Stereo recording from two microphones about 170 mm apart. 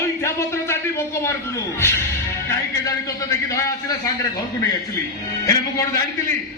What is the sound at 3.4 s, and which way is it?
Speech, 20° left (ahead or behind).